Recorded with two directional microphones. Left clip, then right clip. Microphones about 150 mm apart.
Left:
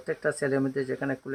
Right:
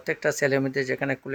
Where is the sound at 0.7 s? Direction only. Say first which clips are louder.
Right 4 dB; 35° right (ahead or behind).